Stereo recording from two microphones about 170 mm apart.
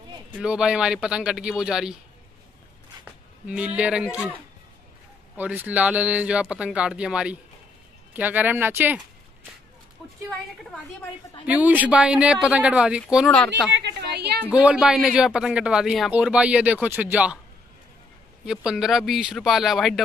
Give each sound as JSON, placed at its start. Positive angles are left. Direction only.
{"t": 0.4, "sound": "speech", "side_deg": -5}
{"t": 3.4, "sound": "speech", "side_deg": -5}
{"t": 10.6, "sound": "speech", "side_deg": 5}
{"t": 11.4, "sound": "speech", "side_deg": -10}
{"t": 13.7, "sound": "a woman's voice", "side_deg": -80}
{"t": 14.5, "sound": "speech", "side_deg": -5}
{"t": 18.4, "sound": "speech", "side_deg": -5}